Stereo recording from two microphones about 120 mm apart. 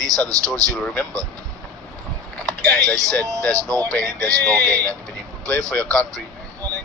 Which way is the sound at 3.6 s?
30° right (ahead or behind).